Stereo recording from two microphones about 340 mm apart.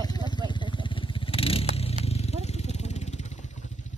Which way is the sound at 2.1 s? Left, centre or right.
Centre.